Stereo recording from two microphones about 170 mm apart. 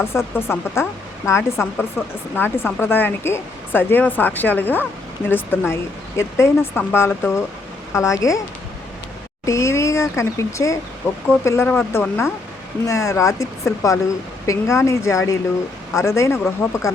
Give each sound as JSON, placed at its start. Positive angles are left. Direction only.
{"t": 0.0, "sound": "speech", "side_deg": 15}
{"t": 9.5, "sound": "speech", "side_deg": 15}